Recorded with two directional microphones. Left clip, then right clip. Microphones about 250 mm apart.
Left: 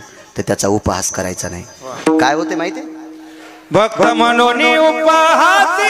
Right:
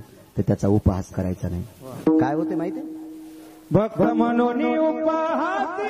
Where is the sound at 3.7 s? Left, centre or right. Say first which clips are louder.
Left 9 dB; centre.